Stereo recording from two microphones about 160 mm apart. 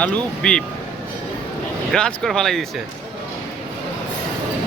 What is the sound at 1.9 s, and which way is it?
Speech, 5° left (ahead or behind).